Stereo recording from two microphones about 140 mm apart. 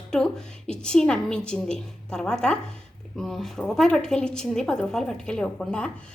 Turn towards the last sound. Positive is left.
turn(degrees=5)  # may be behind; listen again after turning